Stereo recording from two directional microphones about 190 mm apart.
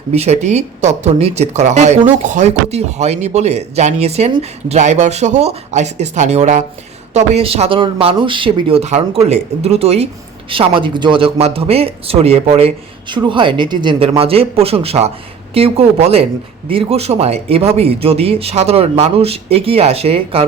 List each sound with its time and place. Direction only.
0.1 s speech: 35° right (ahead or behind)